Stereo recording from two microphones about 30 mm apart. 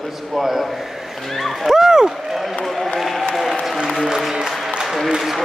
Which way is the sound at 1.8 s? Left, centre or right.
Centre.